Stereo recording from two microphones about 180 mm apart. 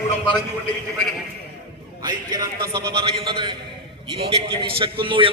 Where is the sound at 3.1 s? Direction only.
30° right (ahead or behind).